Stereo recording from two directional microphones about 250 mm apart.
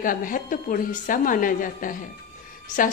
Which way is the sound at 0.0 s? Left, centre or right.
Left.